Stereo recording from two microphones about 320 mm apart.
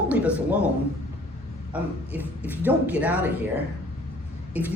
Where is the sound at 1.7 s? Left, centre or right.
Centre.